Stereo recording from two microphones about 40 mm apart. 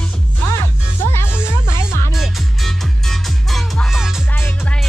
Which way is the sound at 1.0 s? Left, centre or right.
Left.